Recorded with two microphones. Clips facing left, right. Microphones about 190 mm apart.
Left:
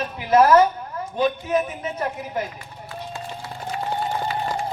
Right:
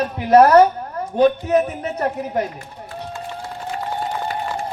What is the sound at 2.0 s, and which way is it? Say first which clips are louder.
Speech: right 6 dB; 50° right (ahead or behind).